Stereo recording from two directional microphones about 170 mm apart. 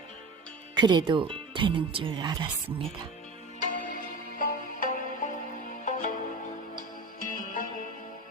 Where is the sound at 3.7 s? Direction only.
55° left (ahead or behind).